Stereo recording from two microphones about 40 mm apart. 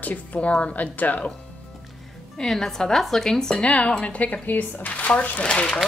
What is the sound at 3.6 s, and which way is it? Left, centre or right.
Speech, left.